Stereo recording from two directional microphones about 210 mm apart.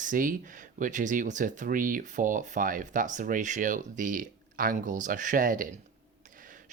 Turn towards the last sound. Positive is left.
turn(degrees=-40)  # may be behind; listen again after turning